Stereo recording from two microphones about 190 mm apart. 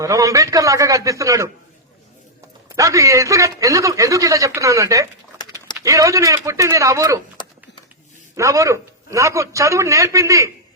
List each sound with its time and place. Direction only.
0.0 s a man's voice: 15° right (ahead or behind)
2.6 s a man's voice: 15° right (ahead or behind)
7.4 s a sound: 25° left (ahead or behind)
8.4 s a man's voice: 15° right (ahead or behind)